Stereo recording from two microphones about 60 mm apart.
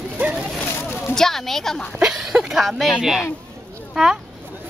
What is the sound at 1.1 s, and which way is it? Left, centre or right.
Speech, centre.